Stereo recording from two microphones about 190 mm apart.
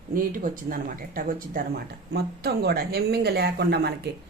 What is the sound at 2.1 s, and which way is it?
Speech, 55° right (ahead or behind).